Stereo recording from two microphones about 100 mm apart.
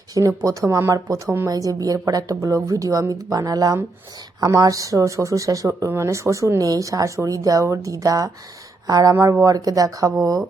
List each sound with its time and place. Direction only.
0.1 s speech: 35° right (ahead or behind)